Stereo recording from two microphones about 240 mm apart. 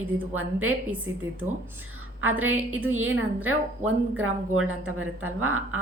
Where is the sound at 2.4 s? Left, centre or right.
Right.